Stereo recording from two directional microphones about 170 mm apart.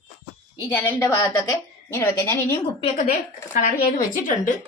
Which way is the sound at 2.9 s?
50° left (ahead or behind).